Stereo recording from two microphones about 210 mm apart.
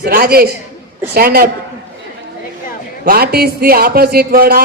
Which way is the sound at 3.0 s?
45° right (ahead or behind).